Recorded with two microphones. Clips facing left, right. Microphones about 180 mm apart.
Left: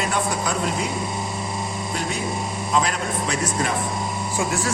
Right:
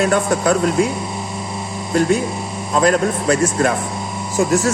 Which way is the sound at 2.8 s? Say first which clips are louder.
Right 10 dB; 45° right (ahead or behind).